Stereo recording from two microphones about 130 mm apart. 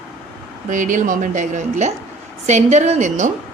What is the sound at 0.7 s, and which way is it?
Speech, 75° right (ahead or behind).